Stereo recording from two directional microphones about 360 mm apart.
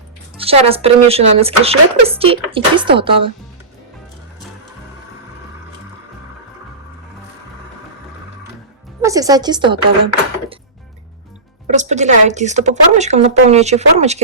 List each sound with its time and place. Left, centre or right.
0.3 s speech: centre
9.0 s speech: centre
11.7 s speech: centre